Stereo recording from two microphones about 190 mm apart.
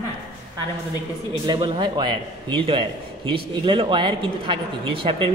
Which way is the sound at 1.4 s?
25° right (ahead or behind).